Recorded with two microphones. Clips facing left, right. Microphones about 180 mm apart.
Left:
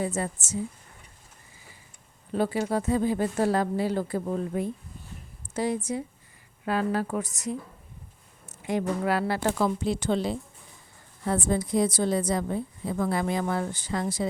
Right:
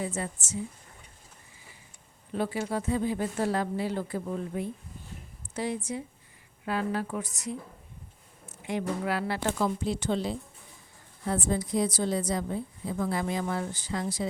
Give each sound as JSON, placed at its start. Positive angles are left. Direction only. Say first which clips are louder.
{"t": 0.0, "sound": "speech", "louder": "left 4 dB", "side_deg": 40}
{"t": 2.3, "sound": "a woman's voice", "louder": "left 4 dB", "side_deg": 40}
{"t": 9.6, "sound": "a woman's voice", "louder": "left 3 dB", "side_deg": 80}